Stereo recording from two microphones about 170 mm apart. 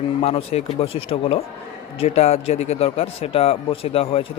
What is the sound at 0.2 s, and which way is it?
Speech, 40° left (ahead or behind).